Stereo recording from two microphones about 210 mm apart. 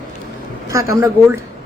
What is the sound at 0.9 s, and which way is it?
Speech, 10° right (ahead or behind).